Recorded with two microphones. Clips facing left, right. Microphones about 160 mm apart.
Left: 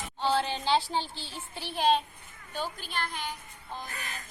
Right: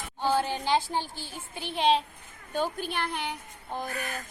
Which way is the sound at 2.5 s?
50° right (ahead or behind).